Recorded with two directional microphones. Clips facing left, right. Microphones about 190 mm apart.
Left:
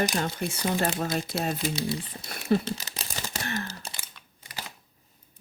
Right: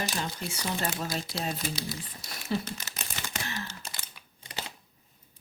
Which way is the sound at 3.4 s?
55° left (ahead or behind).